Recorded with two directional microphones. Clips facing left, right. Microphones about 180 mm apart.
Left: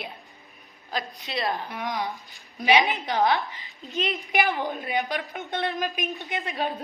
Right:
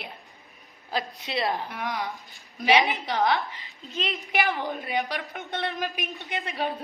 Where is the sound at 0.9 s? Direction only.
25° right (ahead or behind).